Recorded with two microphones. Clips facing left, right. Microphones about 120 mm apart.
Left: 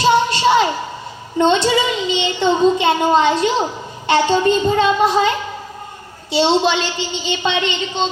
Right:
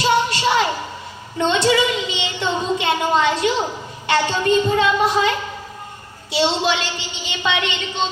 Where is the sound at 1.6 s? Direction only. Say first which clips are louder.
Left 1 dB; 30° left (ahead or behind).